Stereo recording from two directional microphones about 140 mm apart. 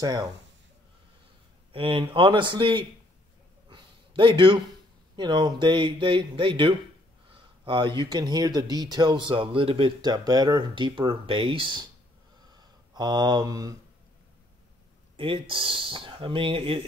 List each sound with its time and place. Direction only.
0.0 s speech: 30° right (ahead or behind)
1.7 s speech: 40° right (ahead or behind)
3.6 s a sound: 35° right (ahead or behind)
5.1 s speech: 30° right (ahead or behind)
15.1 s speech: 35° right (ahead or behind)